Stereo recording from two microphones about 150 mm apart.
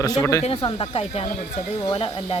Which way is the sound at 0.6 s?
35° left (ahead or behind).